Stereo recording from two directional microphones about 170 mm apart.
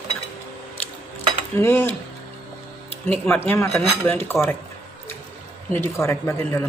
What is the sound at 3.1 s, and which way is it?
A woman's voice, 10° left (ahead or behind).